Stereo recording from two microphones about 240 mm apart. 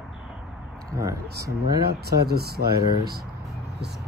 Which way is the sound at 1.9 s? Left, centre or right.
Right.